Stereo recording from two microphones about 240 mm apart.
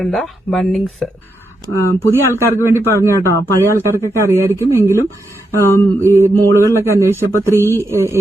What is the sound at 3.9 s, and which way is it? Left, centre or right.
Speech, centre.